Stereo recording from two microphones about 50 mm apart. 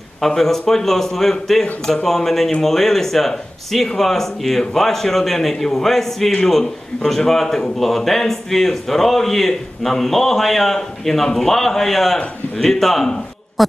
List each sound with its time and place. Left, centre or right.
0.2 s a man's voice: centre